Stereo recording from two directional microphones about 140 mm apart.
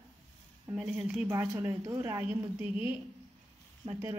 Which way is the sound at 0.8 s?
5° right (ahead or behind).